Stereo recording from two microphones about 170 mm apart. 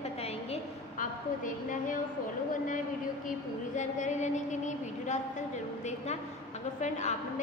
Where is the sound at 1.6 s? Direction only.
50° left (ahead or behind).